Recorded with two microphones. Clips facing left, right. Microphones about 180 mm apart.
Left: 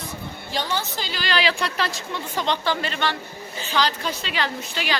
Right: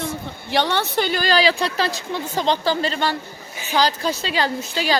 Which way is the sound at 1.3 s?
35° right (ahead or behind).